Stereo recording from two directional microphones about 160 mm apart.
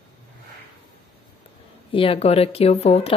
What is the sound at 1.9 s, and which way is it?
Speech, 35° left (ahead or behind).